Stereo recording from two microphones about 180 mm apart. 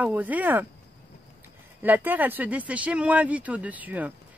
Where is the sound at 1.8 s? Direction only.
10° right (ahead or behind).